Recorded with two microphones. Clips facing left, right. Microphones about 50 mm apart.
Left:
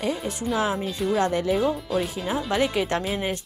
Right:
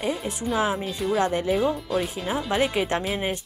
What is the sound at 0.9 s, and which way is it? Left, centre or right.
Speech, centre.